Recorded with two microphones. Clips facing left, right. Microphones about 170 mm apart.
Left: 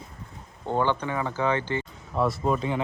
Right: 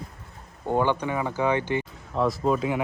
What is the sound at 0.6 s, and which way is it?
Speech, 10° right (ahead or behind).